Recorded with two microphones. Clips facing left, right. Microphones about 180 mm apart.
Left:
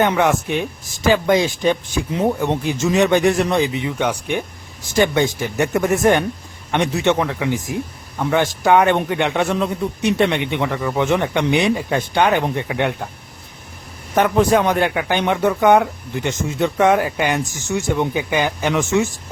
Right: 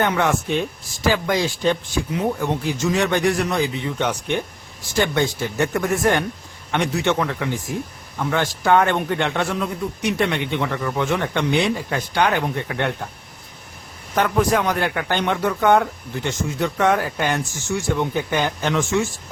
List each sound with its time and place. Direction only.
0.0 s speech: 15° left (ahead or behind)
14.2 s speech: 20° left (ahead or behind)